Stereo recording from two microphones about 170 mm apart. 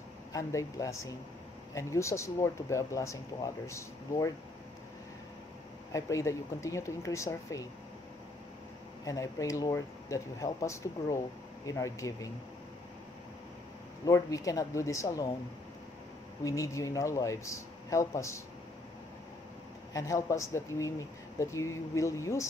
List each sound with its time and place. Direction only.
0.3 s speech: 20° left (ahead or behind)
5.9 s speech: 20° left (ahead or behind)
9.0 s speech: 20° left (ahead or behind)
14.0 s speech: 20° left (ahead or behind)
16.4 s speech: 20° left (ahead or behind)
19.9 s speech: 20° left (ahead or behind)